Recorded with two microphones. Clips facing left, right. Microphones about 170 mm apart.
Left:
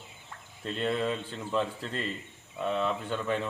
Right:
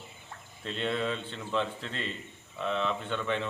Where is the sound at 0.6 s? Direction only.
5° left (ahead or behind).